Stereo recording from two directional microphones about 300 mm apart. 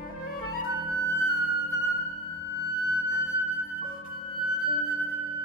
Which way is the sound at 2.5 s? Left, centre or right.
Left.